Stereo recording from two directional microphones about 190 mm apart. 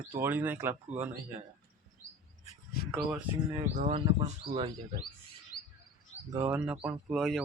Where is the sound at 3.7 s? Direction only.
35° right (ahead or behind).